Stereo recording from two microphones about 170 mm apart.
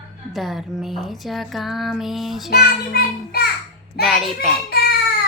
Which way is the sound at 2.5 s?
65° left (ahead or behind).